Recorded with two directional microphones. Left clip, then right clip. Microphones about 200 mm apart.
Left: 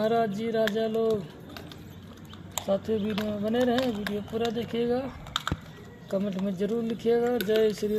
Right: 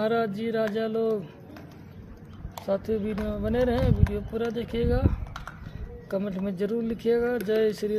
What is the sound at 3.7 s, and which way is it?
Speech, 20° right (ahead or behind).